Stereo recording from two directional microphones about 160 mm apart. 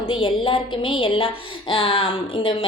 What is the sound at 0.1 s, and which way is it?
A woman's voice, 35° left (ahead or behind).